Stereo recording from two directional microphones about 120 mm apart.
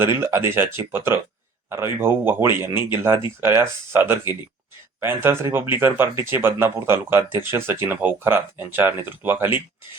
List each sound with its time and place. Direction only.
0.0 s speech: 20° right (ahead or behind)